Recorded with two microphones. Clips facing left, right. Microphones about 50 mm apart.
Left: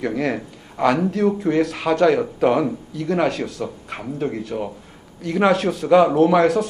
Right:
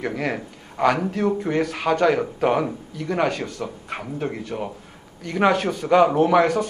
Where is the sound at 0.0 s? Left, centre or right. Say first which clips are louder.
Left 3 dB; centre.